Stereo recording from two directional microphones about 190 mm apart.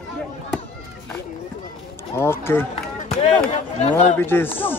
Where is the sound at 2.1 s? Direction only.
15° left (ahead or behind).